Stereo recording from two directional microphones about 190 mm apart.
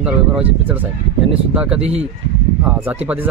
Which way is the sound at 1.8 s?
35° right (ahead or behind).